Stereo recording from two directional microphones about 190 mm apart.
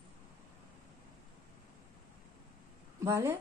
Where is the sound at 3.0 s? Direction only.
15° right (ahead or behind).